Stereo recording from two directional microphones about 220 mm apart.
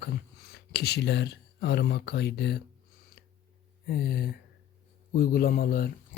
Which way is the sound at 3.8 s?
45° left (ahead or behind).